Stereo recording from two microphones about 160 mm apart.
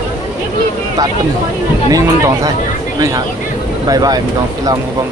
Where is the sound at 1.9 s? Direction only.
20° right (ahead or behind).